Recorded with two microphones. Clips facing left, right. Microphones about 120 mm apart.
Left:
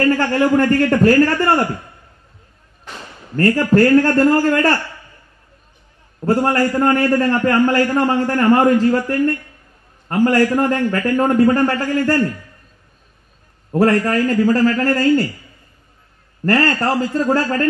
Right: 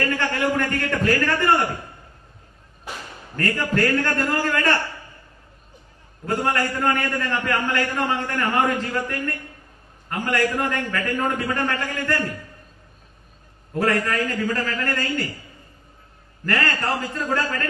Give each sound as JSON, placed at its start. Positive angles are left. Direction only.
{"t": 0.1, "sound": "a man's voice", "side_deg": 35}
{"t": 2.9, "sound": "a sound", "side_deg": -10}
{"t": 3.3, "sound": "a man's voice", "side_deg": 35}
{"t": 6.2, "sound": "a man's voice", "side_deg": 35}
{"t": 13.7, "sound": "a man's voice", "side_deg": 35}
{"t": 16.4, "sound": "a man's voice", "side_deg": 35}